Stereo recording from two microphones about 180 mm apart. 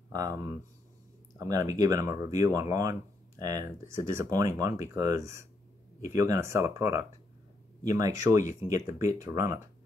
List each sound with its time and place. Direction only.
0.1 s speech: 20° right (ahead or behind)